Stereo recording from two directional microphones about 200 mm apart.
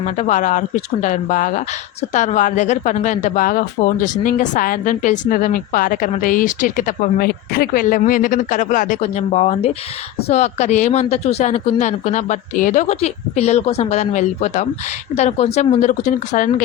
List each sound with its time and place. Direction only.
0.0 s a woman's voice: 35° left (ahead or behind)